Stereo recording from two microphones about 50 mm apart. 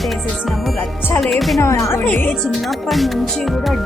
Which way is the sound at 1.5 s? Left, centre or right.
Left.